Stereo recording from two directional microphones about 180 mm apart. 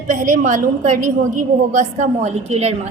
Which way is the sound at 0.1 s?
45° right (ahead or behind).